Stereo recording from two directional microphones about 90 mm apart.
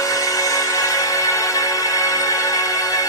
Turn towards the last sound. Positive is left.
turn(degrees=40)  # may be behind; listen again after turning